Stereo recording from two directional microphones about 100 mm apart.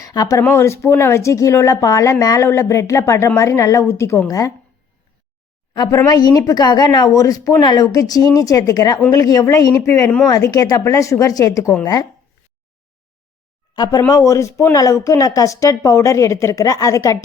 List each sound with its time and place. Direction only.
0.0 s a woman's voice: 40° left (ahead or behind)
5.7 s a woman's voice: 45° left (ahead or behind)
13.7 s speech: 45° left (ahead or behind)
14.1 s a woman's voice: 30° left (ahead or behind)